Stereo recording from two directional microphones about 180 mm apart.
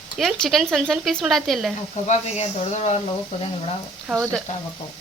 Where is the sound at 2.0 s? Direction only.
35° left (ahead or behind).